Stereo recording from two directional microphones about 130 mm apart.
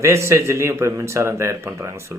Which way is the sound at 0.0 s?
20° right (ahead or behind).